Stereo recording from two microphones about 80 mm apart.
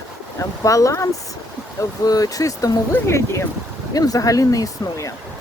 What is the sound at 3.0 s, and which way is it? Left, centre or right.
Speech, left.